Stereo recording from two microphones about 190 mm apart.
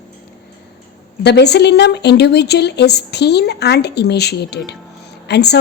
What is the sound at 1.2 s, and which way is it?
Speech, 60° left (ahead or behind).